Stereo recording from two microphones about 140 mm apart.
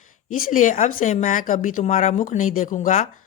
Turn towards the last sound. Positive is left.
turn(degrees=70)  # may be behind; listen again after turning